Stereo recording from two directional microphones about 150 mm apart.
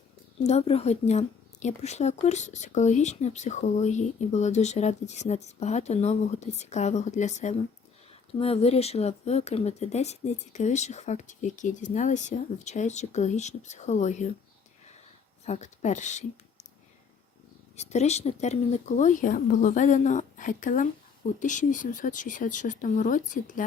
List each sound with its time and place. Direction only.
0.4 s speech: 45° left (ahead or behind)
15.4 s speech: 50° left (ahead or behind)
17.7 s speech: 45° left (ahead or behind)